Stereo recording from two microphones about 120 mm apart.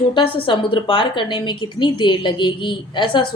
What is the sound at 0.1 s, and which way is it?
A woman's voice, 45° left (ahead or behind).